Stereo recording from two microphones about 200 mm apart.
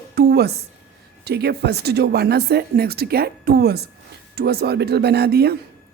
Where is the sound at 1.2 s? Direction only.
55° right (ahead or behind).